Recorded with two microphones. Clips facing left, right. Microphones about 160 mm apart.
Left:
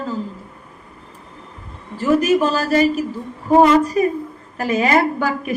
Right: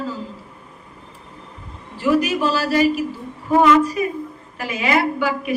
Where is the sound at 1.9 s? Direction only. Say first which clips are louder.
Left 3 dB; 45° left (ahead or behind).